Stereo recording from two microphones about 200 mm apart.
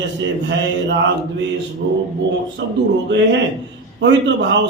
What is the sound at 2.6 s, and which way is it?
Speech, 60° right (ahead or behind).